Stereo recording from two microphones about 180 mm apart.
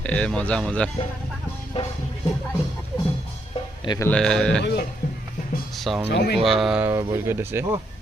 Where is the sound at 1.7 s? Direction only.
35° left (ahead or behind).